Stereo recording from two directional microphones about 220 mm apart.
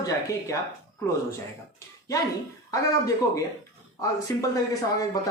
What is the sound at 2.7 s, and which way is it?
Speech, 15° left (ahead or behind).